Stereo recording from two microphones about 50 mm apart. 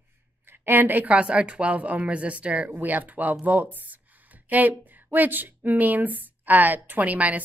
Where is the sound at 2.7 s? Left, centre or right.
Right.